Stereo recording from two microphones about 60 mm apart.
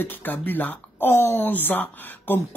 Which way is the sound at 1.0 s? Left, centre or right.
Left.